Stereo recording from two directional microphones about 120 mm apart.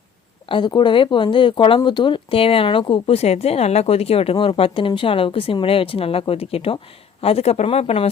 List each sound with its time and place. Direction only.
0.4 s speech: 40° left (ahead or behind); by 8.1 s 60° left (ahead or behind)